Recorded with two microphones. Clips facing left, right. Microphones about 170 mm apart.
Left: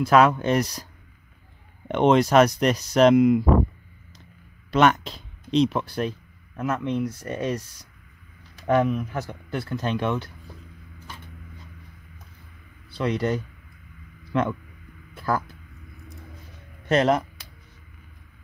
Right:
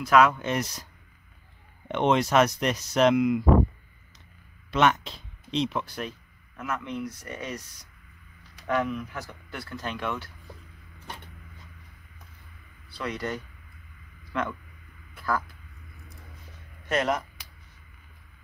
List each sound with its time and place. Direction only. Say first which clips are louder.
0.0 s speech: left 3 dB; 30° left (ahead or behind)
1.9 s speech: left 5 dB; 40° left (ahead or behind)
4.6 s speech: left 4 dB; 40° left (ahead or behind)
8.6 s speech: left 6 dB; 30° left (ahead or behind)
12.9 s speech: left 8 dB; 25° left (ahead or behind)
16.9 s speech: left 6 dB; 30° left (ahead or behind)